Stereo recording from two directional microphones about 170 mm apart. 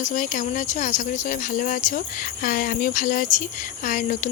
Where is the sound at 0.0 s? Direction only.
50° left (ahead or behind).